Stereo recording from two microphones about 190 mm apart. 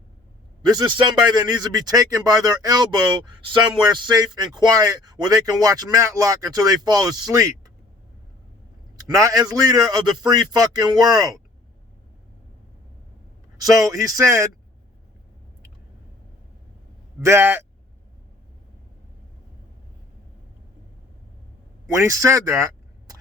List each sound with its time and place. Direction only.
0.6 s speech: 20° right (ahead or behind)
9.0 s speech: 20° right (ahead or behind)
13.6 s speech: 20° right (ahead or behind)
17.2 s speech: 15° right (ahead or behind)
21.8 s speech: 15° right (ahead or behind)